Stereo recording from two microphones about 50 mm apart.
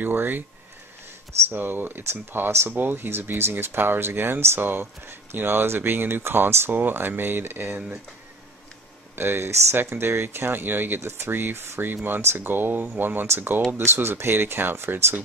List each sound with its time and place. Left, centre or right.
0.0 s speech: right
1.5 s speech: right
6.7 s speech: right
9.1 s speech: right
11.0 s speech: right
11.9 s speech: right